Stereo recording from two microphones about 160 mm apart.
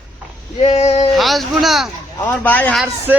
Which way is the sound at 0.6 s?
40° left (ahead or behind).